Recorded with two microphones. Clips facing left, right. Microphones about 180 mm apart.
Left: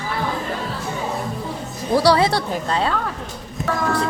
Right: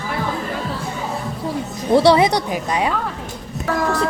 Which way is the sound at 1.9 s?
25° right (ahead or behind).